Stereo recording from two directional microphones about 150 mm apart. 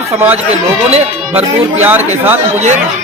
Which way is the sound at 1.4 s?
10° right (ahead or behind).